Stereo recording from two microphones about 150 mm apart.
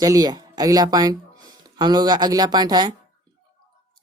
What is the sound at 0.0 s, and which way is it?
Speech, 25° right (ahead or behind).